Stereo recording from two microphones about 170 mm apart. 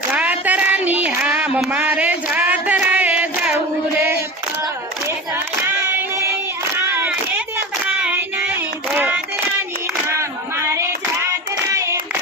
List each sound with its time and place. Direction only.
0.1 s a sound: 10° right (ahead or behind)
6.7 s child singing: 10° right (ahead or behind)
10.1 s hands: 15° right (ahead or behind)